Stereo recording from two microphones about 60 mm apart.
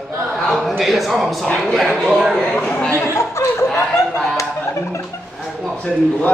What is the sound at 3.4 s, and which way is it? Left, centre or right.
Snicker, left.